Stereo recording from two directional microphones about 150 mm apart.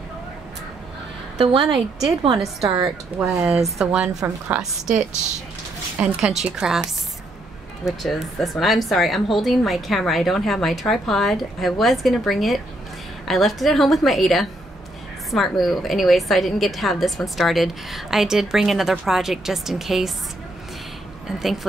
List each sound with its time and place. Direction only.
1.4 s a woman's voice: 35° right (ahead or behind)
2.3 s a woman's voice: centre (ahead or behind)
5.9 s a woman's voice: 5° right (ahead or behind)
7.8 s a woman's voice: centre (ahead or behind)